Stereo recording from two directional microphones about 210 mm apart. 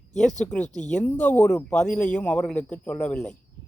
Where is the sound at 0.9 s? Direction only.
10° left (ahead or behind).